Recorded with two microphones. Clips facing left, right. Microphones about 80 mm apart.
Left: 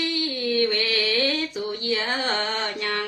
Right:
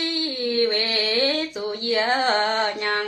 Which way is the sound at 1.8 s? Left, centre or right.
Right.